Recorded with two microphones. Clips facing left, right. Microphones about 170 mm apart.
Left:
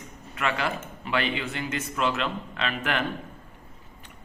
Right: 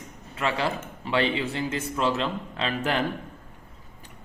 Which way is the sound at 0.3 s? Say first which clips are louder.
Right 1 dB; 30° right (ahead or behind).